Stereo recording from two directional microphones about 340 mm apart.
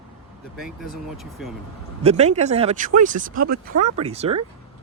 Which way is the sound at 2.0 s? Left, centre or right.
Centre.